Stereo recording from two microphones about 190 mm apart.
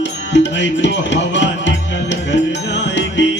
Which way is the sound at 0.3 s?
70° left (ahead or behind).